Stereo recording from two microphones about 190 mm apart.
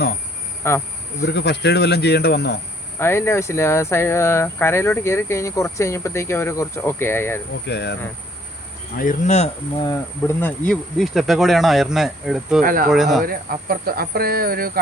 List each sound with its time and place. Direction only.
0.6 s speech: 15° left (ahead or behind)
1.2 s cricket: 60° left (ahead or behind)
3.0 s speech: 15° left (ahead or behind)
7.7 s cricket: 60° left (ahead or behind)
9.0 s speech: 40° left (ahead or behind)
9.8 s speech: 15° left (ahead or behind)
10.7 s speech: centre (ahead or behind)
12.6 s speech: 50° right (ahead or behind)
12.9 s speech: centre (ahead or behind)
13.2 s speech: 50° right (ahead or behind)